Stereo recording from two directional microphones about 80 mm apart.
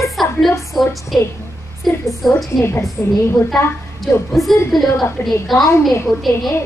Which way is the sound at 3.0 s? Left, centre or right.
Left.